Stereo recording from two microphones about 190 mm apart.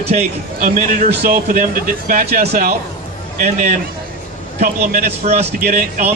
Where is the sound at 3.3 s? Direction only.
40° right (ahead or behind).